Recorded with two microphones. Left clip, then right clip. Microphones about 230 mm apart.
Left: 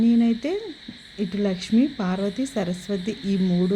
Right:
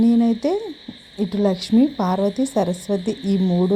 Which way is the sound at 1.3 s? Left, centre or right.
Centre.